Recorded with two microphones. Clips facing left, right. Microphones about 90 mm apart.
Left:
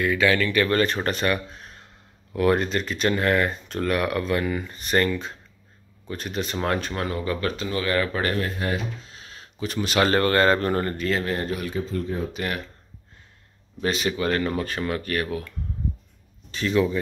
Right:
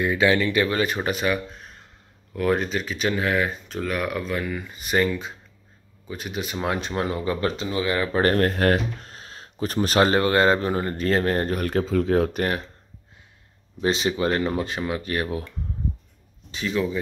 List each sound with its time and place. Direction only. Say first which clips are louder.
0.0 s speech: right 1 dB; 25° right (ahead or behind)
0.7 s speech: left 1 dB; 10° right (ahead or behind)
6.8 s speech: right 2 dB; 20° right (ahead or behind)
8.1 s speech: right 5 dB; 40° right (ahead or behind)
8.4 s speech: right 6 dB; 60° right (ahead or behind)
9.1 s a sound: right 3 dB; 35° right (ahead or behind)
10.0 s speech: left 1 dB; 20° right (ahead or behind)
11.0 s speech: right 3 dB; 40° right (ahead or behind)
11.7 s speech: right 7 dB; 75° right (ahead or behind)
13.7 s speech: right 2 dB; 25° right (ahead or behind)
16.7 s speech: left 3 dB; centre (ahead or behind)